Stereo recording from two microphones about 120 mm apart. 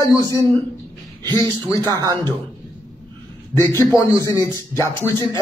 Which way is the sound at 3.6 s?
25° left (ahead or behind).